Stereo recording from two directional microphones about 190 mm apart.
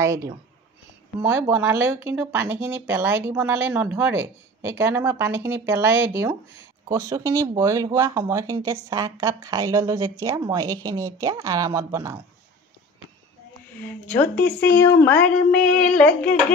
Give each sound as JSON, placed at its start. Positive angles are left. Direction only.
{"t": 0.0, "sound": "speech", "side_deg": -15}
{"t": 1.5, "sound": "speech", "side_deg": -10}
{"t": 14.0, "sound": "speech", "side_deg": 10}
{"t": 15.2, "sound": "a sound", "side_deg": 5}